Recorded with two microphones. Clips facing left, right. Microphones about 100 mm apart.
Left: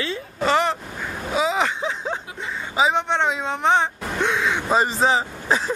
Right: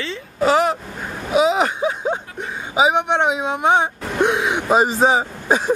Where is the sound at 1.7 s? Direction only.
15° right (ahead or behind).